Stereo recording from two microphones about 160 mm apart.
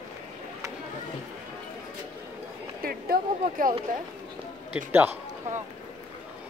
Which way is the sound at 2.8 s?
65° right (ahead or behind).